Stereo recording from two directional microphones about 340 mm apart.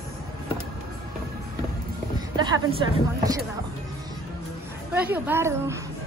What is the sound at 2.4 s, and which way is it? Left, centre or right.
Speech, centre.